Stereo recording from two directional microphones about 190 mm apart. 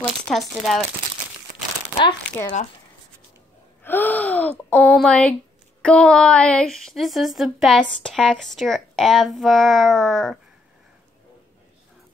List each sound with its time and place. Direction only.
0.3 s speech: centre (ahead or behind)
3.8 s speech: 10° left (ahead or behind)